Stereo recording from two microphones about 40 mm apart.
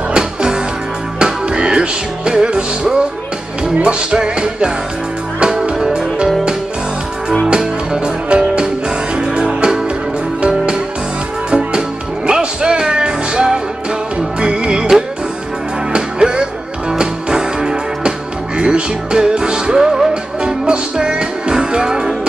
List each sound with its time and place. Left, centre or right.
0.1 s music: right
7.9 s music: right
12.3 s music: right
20.6 s music: right